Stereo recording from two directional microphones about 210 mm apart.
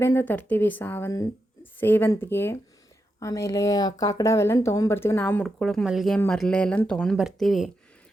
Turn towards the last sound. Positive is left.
turn(degrees=0)  # may be behind; listen again after turning